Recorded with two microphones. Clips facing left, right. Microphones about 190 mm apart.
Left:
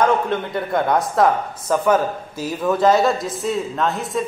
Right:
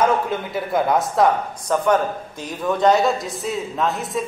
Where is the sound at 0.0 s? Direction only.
5° right (ahead or behind).